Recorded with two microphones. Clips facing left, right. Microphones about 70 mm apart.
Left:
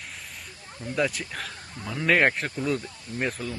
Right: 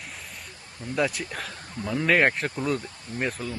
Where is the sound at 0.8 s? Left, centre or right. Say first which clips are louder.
Right 1 dB; centre.